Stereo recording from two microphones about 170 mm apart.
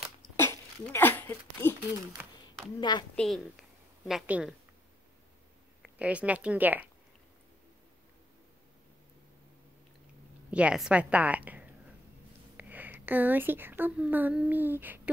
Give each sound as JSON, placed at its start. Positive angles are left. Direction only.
{"t": 0.4, "sound": "a sound", "side_deg": 15}
{"t": 2.8, "sound": "a woman's voice", "side_deg": 25}
{"t": 3.2, "sound": "a woman's voice", "side_deg": 0}
{"t": 5.8, "sound": "a woman's voice", "side_deg": -10}
{"t": 10.5, "sound": "a woman's voice", "side_deg": -5}